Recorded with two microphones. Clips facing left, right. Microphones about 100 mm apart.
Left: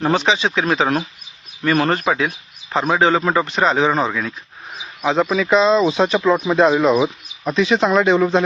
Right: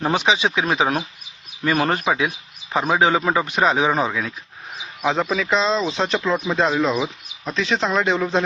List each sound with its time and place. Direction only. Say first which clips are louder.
0.0 s speech: left 2 dB; 15° right (ahead or behind); by 8.4 s centre (ahead or behind)